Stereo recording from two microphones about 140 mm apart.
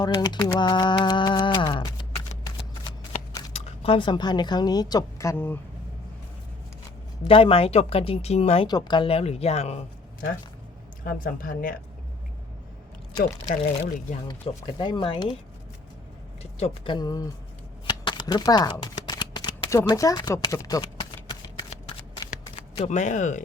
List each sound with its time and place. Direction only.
0.0 s a sound: 30° left (ahead or behind)
3.5 s speech: 50° left (ahead or behind); by 5.5 s 15° left (ahead or behind)
7.3 s speech: 40° left (ahead or behind)
8.6 s speech: 30° left (ahead or behind); by 9.7 s 50° left (ahead or behind)
11.0 s speech: 85° left
13.5 s speech: 65° left (ahead or behind)
14.3 s speech: 35° left (ahead or behind)
16.4 s speech: 50° left (ahead or behind)
16.9 s speech: 25° left (ahead or behind)
17.8 s shuffling cards: 35° left (ahead or behind)
22.8 s speech: 60° left (ahead or behind)